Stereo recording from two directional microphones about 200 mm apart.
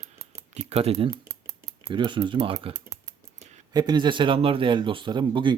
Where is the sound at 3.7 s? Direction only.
20° right (ahead or behind).